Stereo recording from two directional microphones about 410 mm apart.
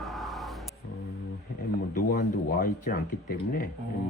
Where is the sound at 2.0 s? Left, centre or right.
Left.